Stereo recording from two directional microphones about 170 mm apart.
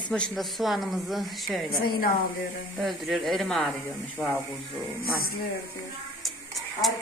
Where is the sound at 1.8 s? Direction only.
60° left (ahead or behind).